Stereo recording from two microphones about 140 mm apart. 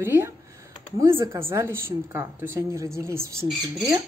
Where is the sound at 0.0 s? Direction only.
15° right (ahead or behind).